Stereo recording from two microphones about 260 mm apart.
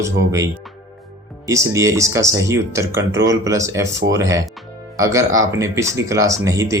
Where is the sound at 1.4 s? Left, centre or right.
Centre.